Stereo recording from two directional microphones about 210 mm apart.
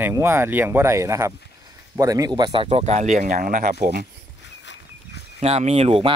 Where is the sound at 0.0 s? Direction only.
10° right (ahead or behind); by 4.0 s 40° right (ahead or behind).